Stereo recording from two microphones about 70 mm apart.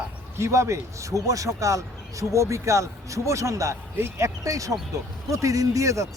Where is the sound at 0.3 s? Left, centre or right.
Right.